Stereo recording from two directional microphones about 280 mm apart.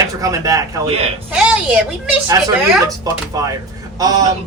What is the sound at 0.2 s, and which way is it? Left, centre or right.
A woman's voice, centre.